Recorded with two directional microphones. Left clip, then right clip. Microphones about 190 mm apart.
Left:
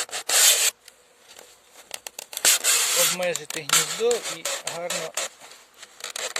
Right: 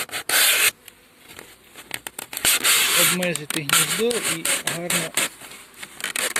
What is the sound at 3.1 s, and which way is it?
Speech, 10° left (ahead or behind).